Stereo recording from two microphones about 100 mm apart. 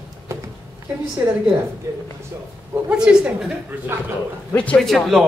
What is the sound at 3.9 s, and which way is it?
Speech, 25° right (ahead or behind).